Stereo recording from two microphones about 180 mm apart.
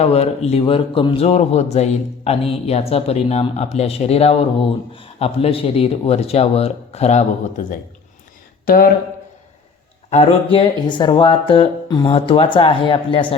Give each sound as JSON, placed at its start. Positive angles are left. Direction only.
{"t": 0.0, "sound": "a man's voice", "side_deg": 35}
{"t": 8.6, "sound": "speech", "side_deg": 55}
{"t": 10.1, "sound": "speech", "side_deg": 30}